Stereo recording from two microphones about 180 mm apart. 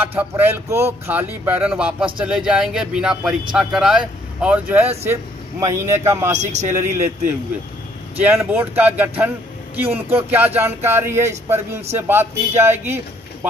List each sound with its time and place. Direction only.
0.0 s speech: 10° right (ahead or behind)
6.3 s a man's voice: 40° right (ahead or behind)
6.7 s speech: 15° right (ahead or behind)